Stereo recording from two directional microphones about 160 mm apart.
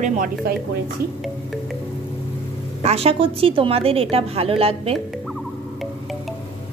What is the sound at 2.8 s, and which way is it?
A woman's voice, 40° right (ahead or behind).